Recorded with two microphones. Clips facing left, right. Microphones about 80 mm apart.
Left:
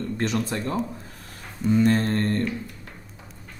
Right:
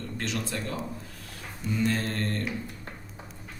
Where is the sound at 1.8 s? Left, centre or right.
Left.